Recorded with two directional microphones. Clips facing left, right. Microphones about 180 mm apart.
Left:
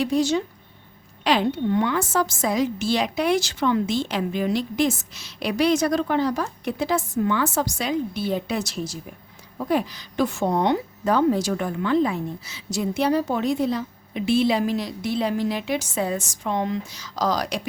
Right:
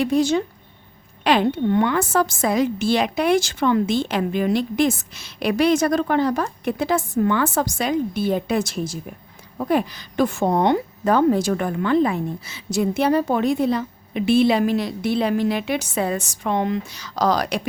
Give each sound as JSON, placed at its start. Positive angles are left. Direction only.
{"t": 0.0, "sound": "a woman's voice", "side_deg": -55}